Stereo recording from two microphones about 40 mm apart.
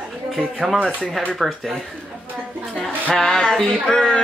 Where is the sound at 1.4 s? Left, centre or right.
Centre.